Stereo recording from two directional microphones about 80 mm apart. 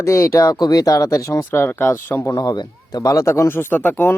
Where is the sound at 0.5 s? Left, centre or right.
Left.